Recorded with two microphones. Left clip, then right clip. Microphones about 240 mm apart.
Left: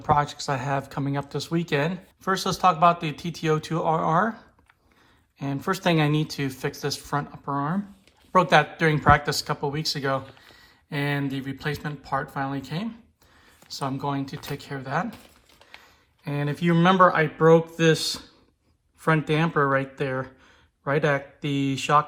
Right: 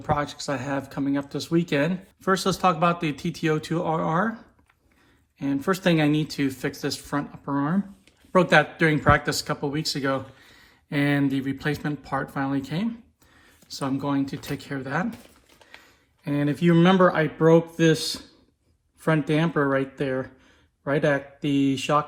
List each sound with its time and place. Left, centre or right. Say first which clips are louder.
0.0 s speech: left 4 dB; left